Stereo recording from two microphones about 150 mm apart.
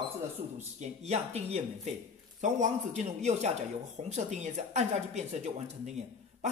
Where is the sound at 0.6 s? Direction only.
45° right (ahead or behind).